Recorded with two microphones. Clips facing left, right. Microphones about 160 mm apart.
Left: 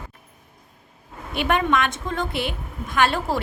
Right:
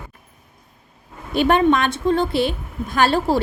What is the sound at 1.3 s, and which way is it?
Speech, 35° right (ahead or behind).